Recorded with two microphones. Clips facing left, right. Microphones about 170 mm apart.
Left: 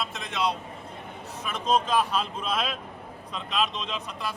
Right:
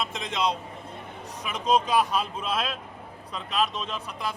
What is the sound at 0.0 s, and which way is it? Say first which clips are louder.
A man's voice: right 1 dB; 20° right (ahead or behind).